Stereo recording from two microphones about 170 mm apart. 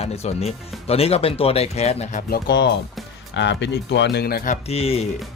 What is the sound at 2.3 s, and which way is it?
Speech, 80° left.